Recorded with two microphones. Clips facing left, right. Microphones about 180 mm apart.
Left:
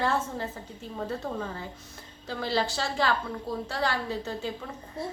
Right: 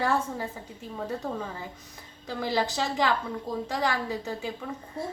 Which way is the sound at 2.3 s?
15° right (ahead or behind).